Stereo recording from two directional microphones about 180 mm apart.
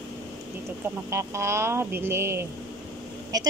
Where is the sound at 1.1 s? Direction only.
15° right (ahead or behind).